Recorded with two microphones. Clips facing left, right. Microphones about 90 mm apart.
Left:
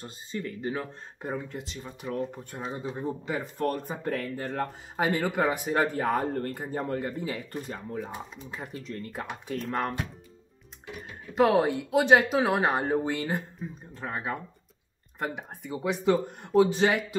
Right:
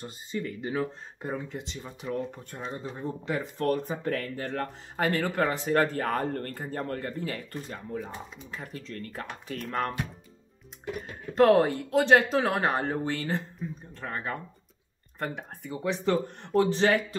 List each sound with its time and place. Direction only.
0.0 s speech: 15° right (ahead or behind)
1.2 s speech: 5° left (ahead or behind)
8.8 s speech: 15° left (ahead or behind)
9.6 s speech: centre (ahead or behind)
11.3 s speech: centre (ahead or behind)